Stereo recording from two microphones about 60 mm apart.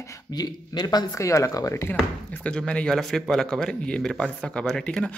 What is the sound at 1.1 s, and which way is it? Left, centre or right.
Speech, left.